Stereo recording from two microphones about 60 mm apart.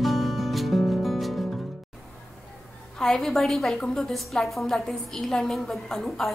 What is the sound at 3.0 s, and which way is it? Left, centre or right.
A woman's voice, centre.